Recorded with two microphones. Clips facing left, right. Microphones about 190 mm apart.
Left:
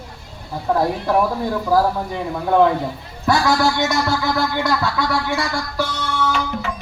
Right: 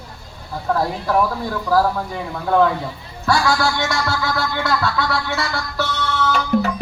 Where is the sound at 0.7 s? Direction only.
15° left (ahead or behind).